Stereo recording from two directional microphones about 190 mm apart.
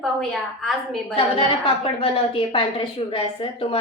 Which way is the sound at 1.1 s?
30° left (ahead or behind).